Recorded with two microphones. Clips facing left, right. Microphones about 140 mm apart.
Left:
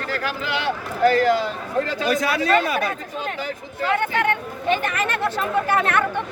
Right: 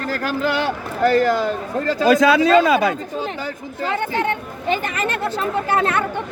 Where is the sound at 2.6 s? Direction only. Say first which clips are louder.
Right 7 dB; 90° right.